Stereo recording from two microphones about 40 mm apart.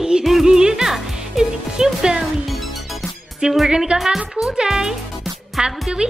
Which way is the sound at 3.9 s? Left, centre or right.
Centre.